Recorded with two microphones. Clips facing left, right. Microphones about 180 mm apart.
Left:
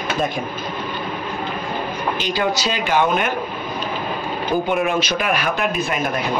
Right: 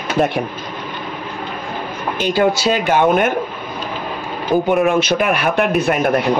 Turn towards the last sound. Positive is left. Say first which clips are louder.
# right 6 dB
turn(degrees=-65)  # may be behind; listen again after turning